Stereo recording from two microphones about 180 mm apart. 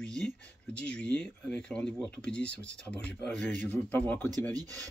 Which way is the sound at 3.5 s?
45° right (ahead or behind).